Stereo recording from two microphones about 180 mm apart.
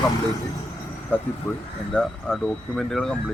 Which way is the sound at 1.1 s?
10° left (ahead or behind).